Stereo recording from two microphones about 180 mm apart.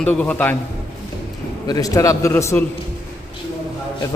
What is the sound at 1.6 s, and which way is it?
Speech, 20° left (ahead or behind).